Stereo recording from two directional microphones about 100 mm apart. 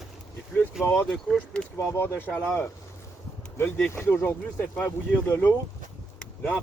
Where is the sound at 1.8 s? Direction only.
25° left (ahead or behind).